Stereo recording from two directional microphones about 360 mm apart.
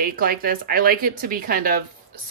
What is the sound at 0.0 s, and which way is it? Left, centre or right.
Speech, right.